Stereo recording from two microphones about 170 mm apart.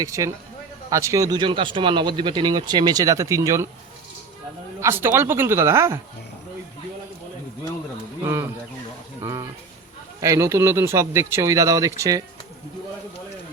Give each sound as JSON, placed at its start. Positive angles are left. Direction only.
{"t": 0.0, "sound": "speech", "side_deg": -20}
{"t": 4.8, "sound": "speech", "side_deg": -15}
{"t": 8.2, "sound": "a sound", "side_deg": -15}
{"t": 10.2, "sound": "speech", "side_deg": -15}